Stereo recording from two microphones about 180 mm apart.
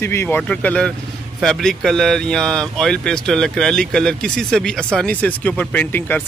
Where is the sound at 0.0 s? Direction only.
15° left (ahead or behind).